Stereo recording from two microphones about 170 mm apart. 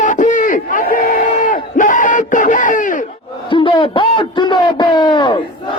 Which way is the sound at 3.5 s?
30° left (ahead or behind).